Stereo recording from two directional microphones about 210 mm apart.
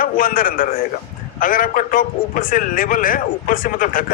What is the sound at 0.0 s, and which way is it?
A man's voice, 40° left (ahead or behind).